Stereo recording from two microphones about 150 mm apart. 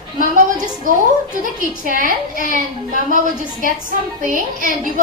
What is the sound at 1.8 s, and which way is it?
Speech, 65° right (ahead or behind).